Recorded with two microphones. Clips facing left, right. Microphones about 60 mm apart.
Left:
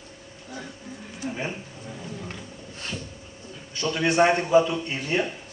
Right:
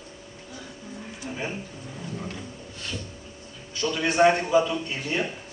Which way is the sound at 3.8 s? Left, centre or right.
Centre.